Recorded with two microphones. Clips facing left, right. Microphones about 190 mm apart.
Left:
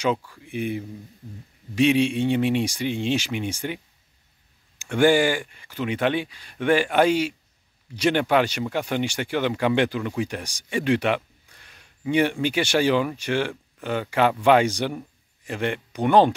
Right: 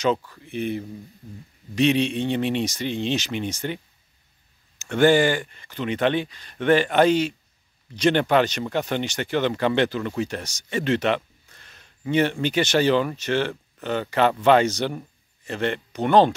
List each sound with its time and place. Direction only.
0.0 s speech: 10° left (ahead or behind)